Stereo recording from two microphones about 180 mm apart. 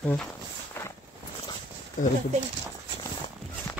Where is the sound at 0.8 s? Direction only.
10° left (ahead or behind).